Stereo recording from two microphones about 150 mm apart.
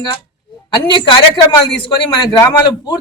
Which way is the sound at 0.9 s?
30° left (ahead or behind).